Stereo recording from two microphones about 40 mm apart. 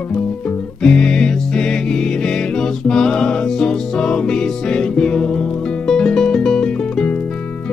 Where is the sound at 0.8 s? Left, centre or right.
Left.